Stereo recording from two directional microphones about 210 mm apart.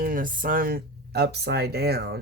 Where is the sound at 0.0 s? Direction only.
40° right (ahead or behind).